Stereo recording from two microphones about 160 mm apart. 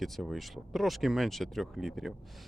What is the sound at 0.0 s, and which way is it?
Speech, centre (ahead or behind).